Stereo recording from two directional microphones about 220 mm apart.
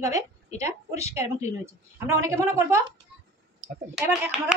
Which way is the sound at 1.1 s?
10° right (ahead or behind).